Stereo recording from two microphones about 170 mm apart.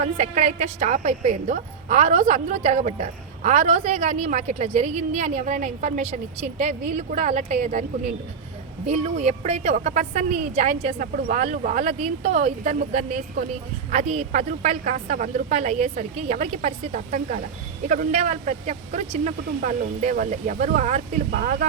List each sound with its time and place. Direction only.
0.0 s a woman's voice: 40° right (ahead or behind)
11.9 s a woman's voice: 40° right (ahead or behind)
21.2 s speech: 55° right (ahead or behind)